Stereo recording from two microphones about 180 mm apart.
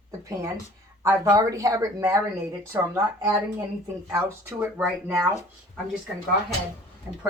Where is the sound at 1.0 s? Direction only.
15° right (ahead or behind).